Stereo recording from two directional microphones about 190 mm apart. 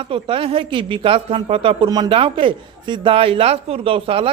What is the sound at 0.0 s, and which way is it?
A woman's voice, 30° right (ahead or behind).